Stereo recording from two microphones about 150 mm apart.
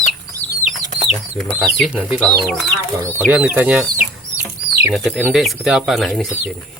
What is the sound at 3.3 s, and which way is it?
Speech, 10° right (ahead or behind).